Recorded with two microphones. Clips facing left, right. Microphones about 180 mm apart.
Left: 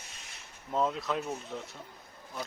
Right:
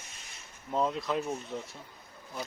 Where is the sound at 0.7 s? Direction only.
Centre (ahead or behind).